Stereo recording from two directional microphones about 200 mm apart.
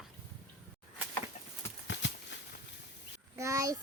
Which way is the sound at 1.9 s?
65° left (ahead or behind).